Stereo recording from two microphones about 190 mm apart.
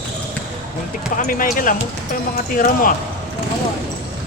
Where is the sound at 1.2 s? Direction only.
45° left (ahead or behind).